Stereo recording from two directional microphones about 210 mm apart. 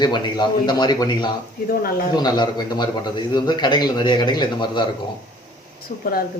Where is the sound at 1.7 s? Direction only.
45° left (ahead or behind).